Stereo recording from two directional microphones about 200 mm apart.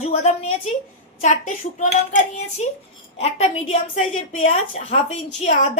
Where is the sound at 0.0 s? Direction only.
35° left (ahead or behind).